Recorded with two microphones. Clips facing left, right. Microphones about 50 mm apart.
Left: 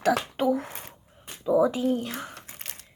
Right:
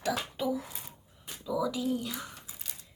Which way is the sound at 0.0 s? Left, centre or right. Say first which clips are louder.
Left 8 dB; left.